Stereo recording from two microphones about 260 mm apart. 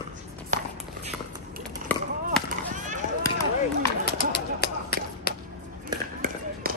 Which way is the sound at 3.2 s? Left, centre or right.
Centre.